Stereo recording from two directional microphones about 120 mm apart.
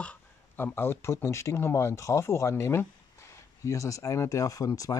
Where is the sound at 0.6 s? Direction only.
20° left (ahead or behind).